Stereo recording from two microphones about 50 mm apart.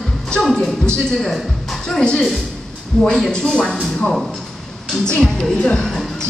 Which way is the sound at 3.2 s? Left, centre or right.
Centre.